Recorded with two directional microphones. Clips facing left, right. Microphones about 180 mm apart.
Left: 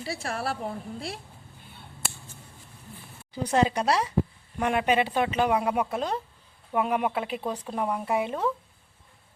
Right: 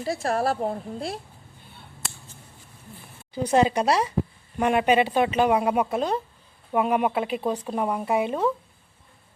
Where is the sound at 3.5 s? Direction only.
20° right (ahead or behind).